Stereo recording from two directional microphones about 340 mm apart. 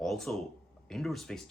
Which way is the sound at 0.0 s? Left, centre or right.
Centre.